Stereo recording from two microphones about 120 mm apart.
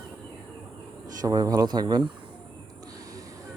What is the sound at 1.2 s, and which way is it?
Speech, 35° right (ahead or behind).